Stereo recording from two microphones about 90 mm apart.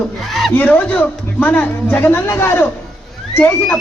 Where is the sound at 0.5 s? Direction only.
15° left (ahead or behind).